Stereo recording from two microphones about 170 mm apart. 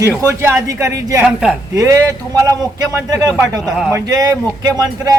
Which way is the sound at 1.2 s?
Centre (ahead or behind).